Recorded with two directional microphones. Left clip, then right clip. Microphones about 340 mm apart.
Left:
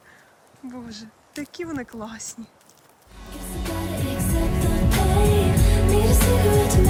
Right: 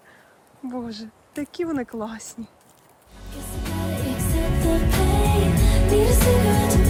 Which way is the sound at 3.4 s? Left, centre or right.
Centre.